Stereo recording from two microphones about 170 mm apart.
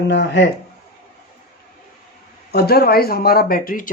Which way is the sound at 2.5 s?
65° left (ahead or behind).